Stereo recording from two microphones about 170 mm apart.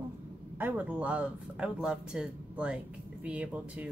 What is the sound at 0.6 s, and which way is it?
Speech, 10° right (ahead or behind).